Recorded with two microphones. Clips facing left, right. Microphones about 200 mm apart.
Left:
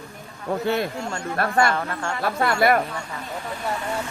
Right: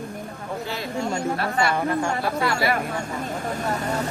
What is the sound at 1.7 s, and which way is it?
Speech, 15° right (ahead or behind).